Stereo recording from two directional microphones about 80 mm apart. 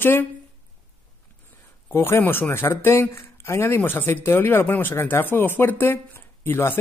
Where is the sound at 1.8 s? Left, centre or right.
Left.